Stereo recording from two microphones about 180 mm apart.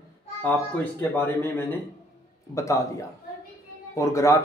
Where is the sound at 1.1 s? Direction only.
10° left (ahead or behind).